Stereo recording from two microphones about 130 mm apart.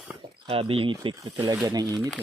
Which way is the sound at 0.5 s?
45° right (ahead or behind).